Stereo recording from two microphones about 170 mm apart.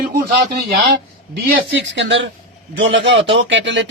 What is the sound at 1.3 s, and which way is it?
A man's voice, 85° right.